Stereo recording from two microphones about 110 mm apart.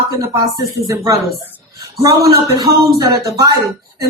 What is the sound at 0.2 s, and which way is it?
A woman's voice, 35° right (ahead or behind).